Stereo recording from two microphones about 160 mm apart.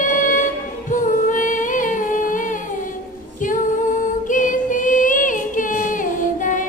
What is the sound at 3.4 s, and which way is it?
Female singing, 55° left (ahead or behind).